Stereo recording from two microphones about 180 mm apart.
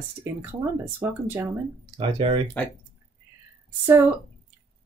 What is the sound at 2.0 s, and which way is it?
Speech, 30° right (ahead or behind).